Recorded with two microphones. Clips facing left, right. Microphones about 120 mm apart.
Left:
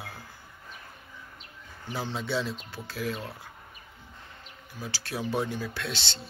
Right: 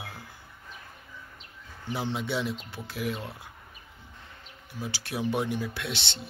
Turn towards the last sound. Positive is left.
turn(degrees=-20)  # may be behind; listen again after turning